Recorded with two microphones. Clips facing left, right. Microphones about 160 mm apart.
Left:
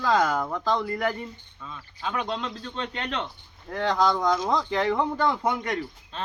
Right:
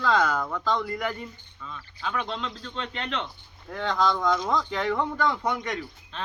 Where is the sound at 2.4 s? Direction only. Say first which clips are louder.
Left 2 dB; 40° left (ahead or behind).